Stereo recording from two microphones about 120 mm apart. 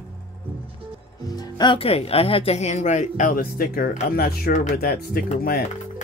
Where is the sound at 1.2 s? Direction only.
30° left (ahead or behind); by 3.3 s 85° left.